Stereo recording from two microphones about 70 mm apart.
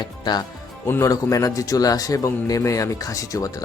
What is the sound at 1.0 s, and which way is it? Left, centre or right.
A man's voice, left.